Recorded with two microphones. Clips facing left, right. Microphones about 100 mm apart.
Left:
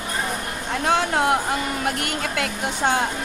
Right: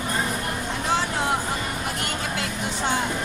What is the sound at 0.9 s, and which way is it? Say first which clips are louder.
A woman's voice: left 5 dB; 60° left (ahead or behind).